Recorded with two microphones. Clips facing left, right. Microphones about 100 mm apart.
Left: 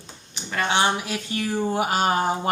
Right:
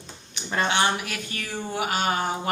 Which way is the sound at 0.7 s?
25° left (ahead or behind).